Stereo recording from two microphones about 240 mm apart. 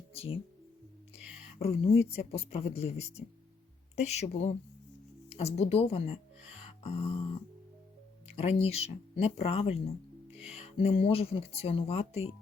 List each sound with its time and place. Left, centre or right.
1.5 s speech: left
6.4 s music: left
8.4 s speech: left